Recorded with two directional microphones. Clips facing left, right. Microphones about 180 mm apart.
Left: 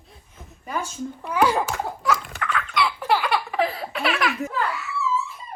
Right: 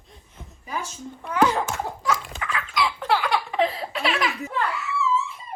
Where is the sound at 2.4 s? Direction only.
Centre (ahead or behind).